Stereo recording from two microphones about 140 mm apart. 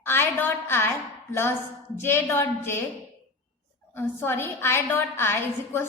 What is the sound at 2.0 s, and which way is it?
Speech, 15° left (ahead or behind).